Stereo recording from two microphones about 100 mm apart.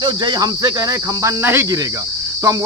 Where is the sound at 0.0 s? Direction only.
45° right (ahead or behind).